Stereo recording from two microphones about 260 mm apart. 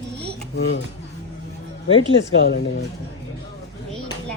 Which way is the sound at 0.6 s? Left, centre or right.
Left.